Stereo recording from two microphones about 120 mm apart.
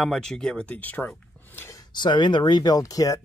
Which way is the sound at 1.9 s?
40° left (ahead or behind).